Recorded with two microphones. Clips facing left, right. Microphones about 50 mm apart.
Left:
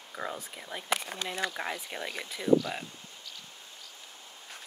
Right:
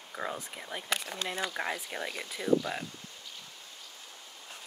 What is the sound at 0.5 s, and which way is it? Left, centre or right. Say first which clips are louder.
Speech: right 1 dB; centre.